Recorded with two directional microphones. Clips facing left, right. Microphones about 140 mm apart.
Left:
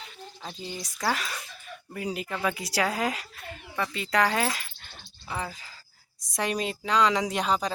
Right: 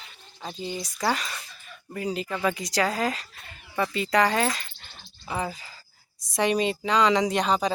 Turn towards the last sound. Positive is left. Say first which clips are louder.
# right 3 dB
turn(degrees=0)  # may be behind; listen again after turning